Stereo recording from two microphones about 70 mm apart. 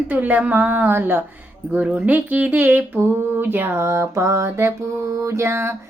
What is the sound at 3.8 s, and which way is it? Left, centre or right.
Mantra, right.